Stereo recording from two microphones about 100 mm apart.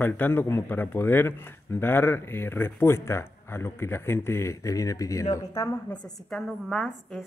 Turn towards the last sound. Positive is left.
turn(degrees=0)  # may be behind; listen again after turning